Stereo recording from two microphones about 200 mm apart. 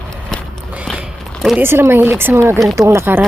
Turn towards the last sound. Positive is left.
turn(degrees=-10)  # may be behind; listen again after turning